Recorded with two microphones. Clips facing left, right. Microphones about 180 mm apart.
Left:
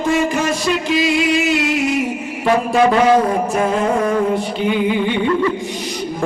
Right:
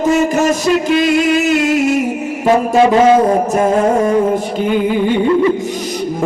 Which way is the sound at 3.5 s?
45° right (ahead or behind).